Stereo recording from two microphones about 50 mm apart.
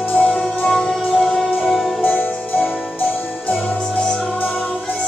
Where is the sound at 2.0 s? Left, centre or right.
Left.